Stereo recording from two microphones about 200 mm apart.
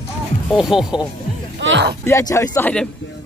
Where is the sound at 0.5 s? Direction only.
5° right (ahead or behind).